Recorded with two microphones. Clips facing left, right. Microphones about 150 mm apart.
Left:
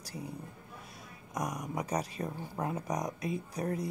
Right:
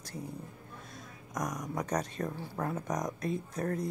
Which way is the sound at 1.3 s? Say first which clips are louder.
Even; 10° left (ahead or behind).